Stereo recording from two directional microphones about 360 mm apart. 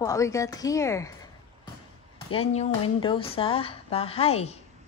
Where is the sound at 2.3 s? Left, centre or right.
Centre.